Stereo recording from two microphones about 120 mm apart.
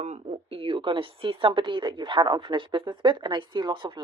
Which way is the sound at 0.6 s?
45° right (ahead or behind).